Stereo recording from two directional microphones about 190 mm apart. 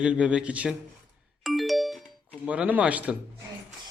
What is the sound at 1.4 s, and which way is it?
Music, centre (ahead or behind).